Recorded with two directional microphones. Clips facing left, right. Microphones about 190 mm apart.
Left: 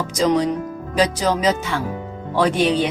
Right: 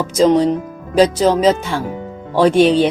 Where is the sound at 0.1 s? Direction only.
30° right (ahead or behind).